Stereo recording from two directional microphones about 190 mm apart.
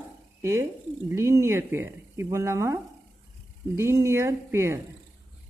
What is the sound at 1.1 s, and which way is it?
Speech, 15° right (ahead or behind).